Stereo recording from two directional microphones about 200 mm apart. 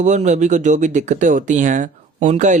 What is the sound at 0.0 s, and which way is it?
Speech, 35° right (ahead or behind).